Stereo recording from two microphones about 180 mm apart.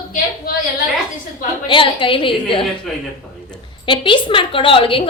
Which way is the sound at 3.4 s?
25° left (ahead or behind).